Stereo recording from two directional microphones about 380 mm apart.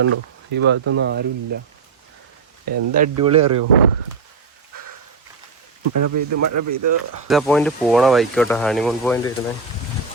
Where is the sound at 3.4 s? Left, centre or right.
Right.